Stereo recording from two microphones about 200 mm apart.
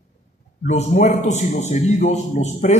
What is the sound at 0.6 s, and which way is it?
A man's voice, 35° left (ahead or behind).